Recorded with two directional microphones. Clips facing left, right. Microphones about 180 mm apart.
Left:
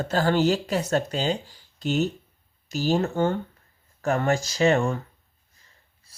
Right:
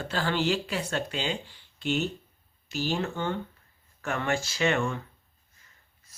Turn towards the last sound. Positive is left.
turn(degrees=35)  # may be behind; listen again after turning